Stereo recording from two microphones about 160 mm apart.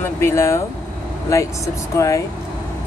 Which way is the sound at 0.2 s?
15° left (ahead or behind).